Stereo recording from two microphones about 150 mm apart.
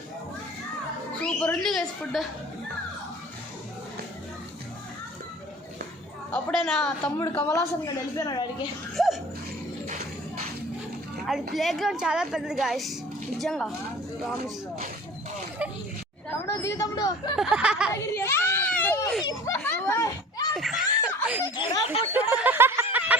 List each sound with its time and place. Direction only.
1.2 s a woman's voice: 5° left (ahead or behind)
6.3 s a woman's voice: 5° left (ahead or behind)
7.3 s a woman's voice: 15° left (ahead or behind)
9.0 s dog: centre (ahead or behind)
9.8 s music: 75° right (ahead or behind)
11.5 s a woman's voice: centre (ahead or behind)
16.5 s a woman's voice: 20° left (ahead or behind)
17.3 s a woman's voice: 5° right (ahead or behind)
17.9 s baby cry: 20° left (ahead or behind)
19.5 s a sound: 15° left (ahead or behind)
20.5 s giggle: centre (ahead or behind)
21.4 s a woman's voice: 30° left (ahead or behind)
22.1 s a sound: 10° right (ahead or behind)